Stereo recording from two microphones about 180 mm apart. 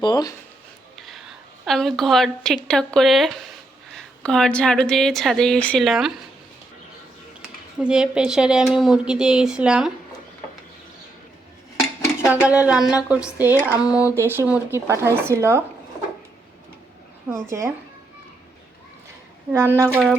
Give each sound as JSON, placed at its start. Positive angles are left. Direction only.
{"t": 0.0, "sound": "speech", "side_deg": 20}
{"t": 0.9, "sound": "a sound", "side_deg": 0}
{"t": 2.6, "sound": "a woman's voice", "side_deg": 5}
{"t": 7.8, "sound": "a woman's voice", "side_deg": -5}
{"t": 12.2, "sound": "speech", "side_deg": -10}
{"t": 17.3, "sound": "speech", "side_deg": -15}
{"t": 19.5, "sound": "speech", "side_deg": -15}